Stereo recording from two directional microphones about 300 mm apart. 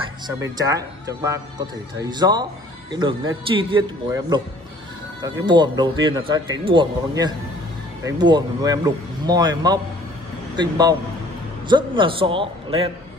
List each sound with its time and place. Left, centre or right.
0.4 s speech: centre